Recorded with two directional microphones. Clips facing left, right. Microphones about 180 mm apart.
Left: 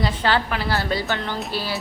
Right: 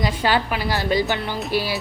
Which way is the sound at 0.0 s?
15° right (ahead or behind).